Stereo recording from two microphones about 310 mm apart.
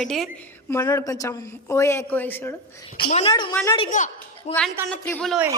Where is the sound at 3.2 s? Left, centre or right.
Centre.